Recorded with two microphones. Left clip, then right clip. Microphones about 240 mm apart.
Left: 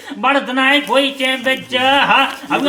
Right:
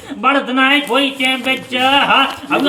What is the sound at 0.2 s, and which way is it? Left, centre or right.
A man's voice, centre.